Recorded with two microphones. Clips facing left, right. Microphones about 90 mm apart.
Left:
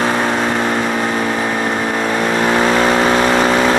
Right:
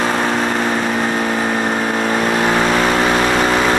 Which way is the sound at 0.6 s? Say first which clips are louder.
Left 1 dB; 40° left (ahead or behind).